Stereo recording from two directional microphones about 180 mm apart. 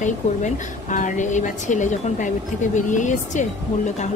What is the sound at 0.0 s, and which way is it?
A woman's voice, 45° left (ahead or behind).